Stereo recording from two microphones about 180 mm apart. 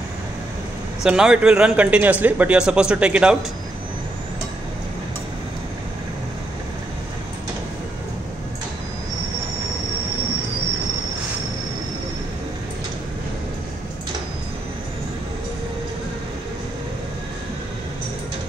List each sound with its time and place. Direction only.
1.0 s speech: 5° right (ahead or behind)